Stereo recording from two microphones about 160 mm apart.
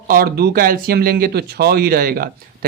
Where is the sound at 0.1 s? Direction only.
70° right (ahead or behind).